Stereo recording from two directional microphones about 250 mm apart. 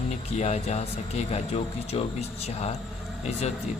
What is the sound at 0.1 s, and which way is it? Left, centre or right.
Speech, left.